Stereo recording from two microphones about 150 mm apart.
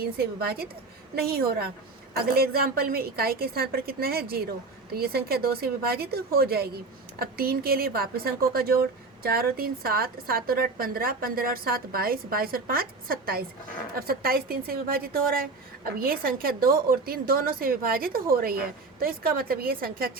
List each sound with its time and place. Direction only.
0.0 s a woman's voice: 90° right